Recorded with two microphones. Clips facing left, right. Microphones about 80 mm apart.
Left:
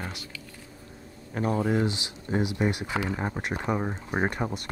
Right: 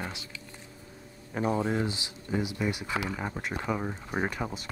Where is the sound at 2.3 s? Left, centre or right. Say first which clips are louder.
Left 4 dB; left.